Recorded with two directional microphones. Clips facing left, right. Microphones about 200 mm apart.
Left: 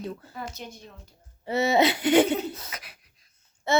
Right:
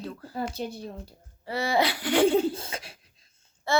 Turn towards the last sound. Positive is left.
turn(degrees=20)  # may be behind; listen again after turning